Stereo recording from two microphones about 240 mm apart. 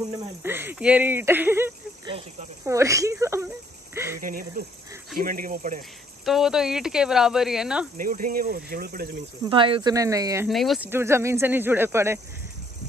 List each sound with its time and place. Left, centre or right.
0.4 s speech: centre
4.2 s speech: right
6.2 s speech: centre
8.0 s speech: right
9.5 s speech: right
10.5 s speech: centre